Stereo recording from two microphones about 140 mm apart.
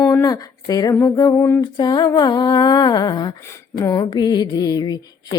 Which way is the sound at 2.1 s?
30° left (ahead or behind).